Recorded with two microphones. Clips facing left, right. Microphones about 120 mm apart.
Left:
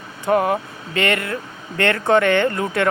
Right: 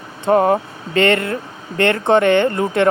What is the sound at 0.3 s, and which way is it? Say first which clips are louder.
Speech: right 4 dB; 30° right (ahead or behind).